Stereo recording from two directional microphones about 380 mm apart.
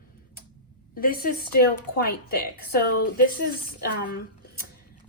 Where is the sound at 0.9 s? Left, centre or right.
Left.